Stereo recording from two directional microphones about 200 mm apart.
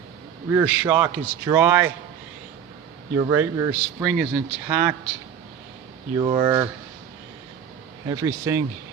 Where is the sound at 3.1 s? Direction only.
15° right (ahead or behind).